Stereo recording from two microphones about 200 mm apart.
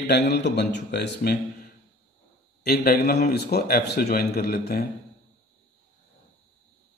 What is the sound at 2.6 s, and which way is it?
A man's voice, 50° left (ahead or behind).